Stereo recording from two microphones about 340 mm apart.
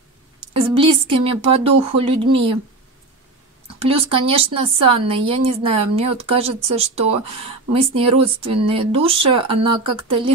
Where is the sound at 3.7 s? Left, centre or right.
Centre.